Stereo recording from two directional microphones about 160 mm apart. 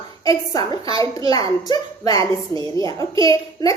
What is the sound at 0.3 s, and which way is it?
A woman's voice, 25° left (ahead or behind).